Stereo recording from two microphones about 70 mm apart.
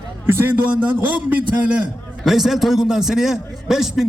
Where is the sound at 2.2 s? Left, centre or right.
Centre.